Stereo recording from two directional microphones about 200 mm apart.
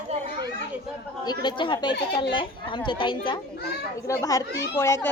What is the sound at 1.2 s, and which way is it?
A woman's voice, 20° left (ahead or behind).